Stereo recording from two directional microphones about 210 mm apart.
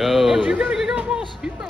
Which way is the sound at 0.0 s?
Centre (ahead or behind).